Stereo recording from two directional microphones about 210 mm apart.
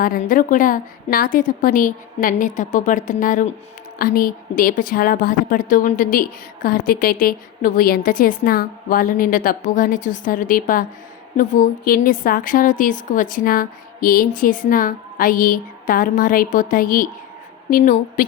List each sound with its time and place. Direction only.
0.0 s a woman's voice: 40° left (ahead or behind)